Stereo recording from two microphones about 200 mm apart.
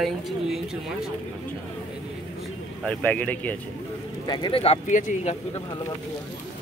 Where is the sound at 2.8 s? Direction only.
5° left (ahead or behind).